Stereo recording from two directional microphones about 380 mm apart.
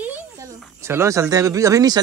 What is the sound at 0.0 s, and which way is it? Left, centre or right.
A man's voice, centre.